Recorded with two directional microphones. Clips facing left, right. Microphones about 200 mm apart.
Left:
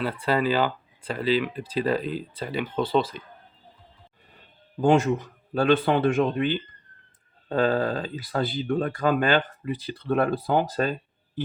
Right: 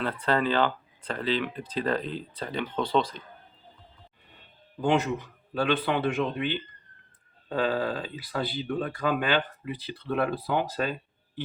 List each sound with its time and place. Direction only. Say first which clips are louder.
0.0 s speech: left 2 dB; 10° left (ahead or behind)
4.8 s speech: left 5 dB; 45° left (ahead or behind)